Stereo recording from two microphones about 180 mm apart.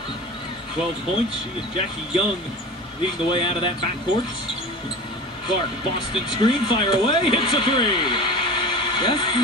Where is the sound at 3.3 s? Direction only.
30° left (ahead or behind).